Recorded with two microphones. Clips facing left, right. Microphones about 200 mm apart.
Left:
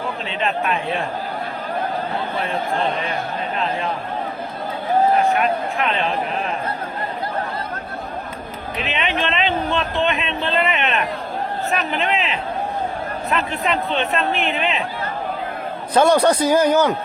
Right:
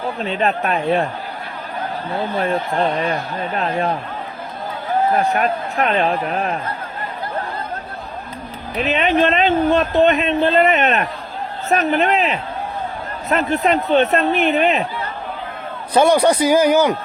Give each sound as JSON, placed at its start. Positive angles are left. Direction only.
{"t": 0.3, "sound": "speech", "side_deg": -40}
{"t": 5.2, "sound": "speech", "side_deg": -40}
{"t": 8.8, "sound": "speech", "side_deg": -40}
{"t": 16.0, "sound": "speech", "side_deg": -10}